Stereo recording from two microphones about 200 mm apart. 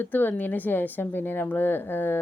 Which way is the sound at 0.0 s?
10° left (ahead or behind).